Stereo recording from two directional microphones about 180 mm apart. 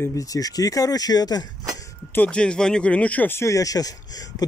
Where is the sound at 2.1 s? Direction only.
10° left (ahead or behind).